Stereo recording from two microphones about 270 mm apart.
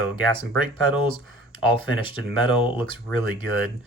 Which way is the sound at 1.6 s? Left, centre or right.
Centre.